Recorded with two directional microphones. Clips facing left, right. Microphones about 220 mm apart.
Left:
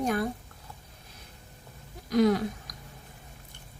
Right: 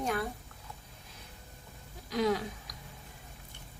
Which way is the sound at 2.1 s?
45° left (ahead or behind).